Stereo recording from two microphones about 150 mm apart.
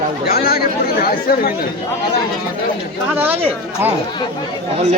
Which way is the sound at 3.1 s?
15° right (ahead or behind).